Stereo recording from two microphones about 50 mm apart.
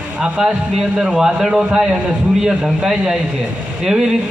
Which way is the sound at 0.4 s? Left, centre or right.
Centre.